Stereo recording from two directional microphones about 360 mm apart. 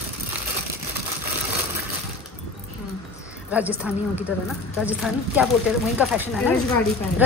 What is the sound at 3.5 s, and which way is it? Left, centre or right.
Speech, centre.